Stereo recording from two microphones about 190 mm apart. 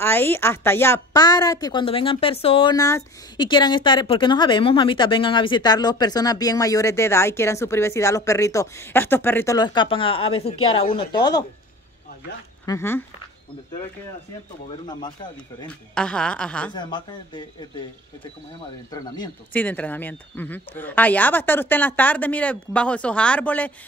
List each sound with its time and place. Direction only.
0.0 s speech: 10° left (ahead or behind)
12.6 s speech: 15° left (ahead or behind)
14.9 s speech: 25° left (ahead or behind)
15.9 s speech: 5° left (ahead or behind)
16.7 s speech: 25° left (ahead or behind)
18.9 s speech: 20° left (ahead or behind)
19.5 s speech: 10° left (ahead or behind)